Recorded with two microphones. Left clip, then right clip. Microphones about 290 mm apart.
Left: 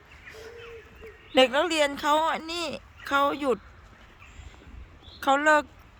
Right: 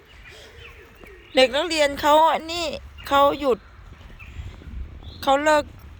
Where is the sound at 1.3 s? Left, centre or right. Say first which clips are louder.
Right 3 dB; centre.